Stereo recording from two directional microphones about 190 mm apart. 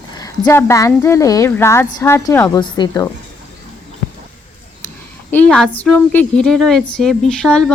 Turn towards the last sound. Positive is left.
turn(degrees=5)  # may be behind; listen again after turning